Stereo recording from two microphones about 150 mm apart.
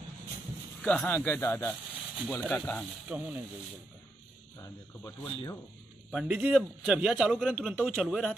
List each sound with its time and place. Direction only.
0.8 s speech: 10° left (ahead or behind)
1.9 s a sound: 10° right (ahead or behind)
2.5 s speech: 10° left (ahead or behind)
3.1 s speech: 10° right (ahead or behind)
4.6 s speech: 25° left (ahead or behind)
6.1 s a man's voice: 10° right (ahead or behind)